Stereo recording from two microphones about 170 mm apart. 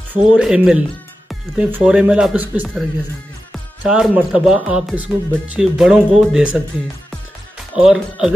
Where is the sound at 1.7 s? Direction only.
5° right (ahead or behind).